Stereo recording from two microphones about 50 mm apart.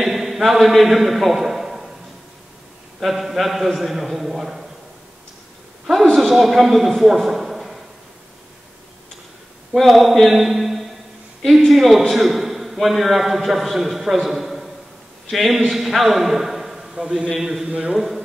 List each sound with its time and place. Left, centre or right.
0.1 s a man's voice: centre
3.0 s a man's voice: centre
6.1 s a man's voice: centre
9.8 s a man's voice: centre
17.6 s a man's voice: centre
17.9 s a man's voice: centre